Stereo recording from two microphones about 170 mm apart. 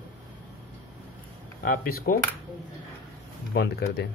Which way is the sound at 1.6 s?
60° left (ahead or behind).